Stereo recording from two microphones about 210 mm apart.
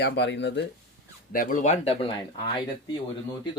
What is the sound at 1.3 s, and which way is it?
Speech, 40° left (ahead or behind).